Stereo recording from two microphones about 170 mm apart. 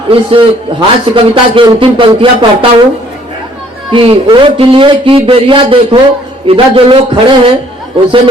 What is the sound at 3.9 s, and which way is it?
A man's voice, 30° right (ahead or behind).